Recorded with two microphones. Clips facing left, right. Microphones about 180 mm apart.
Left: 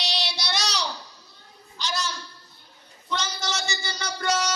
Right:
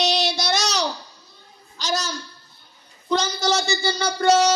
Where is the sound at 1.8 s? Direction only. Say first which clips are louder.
Right 4 dB; 40° right (ahead or behind).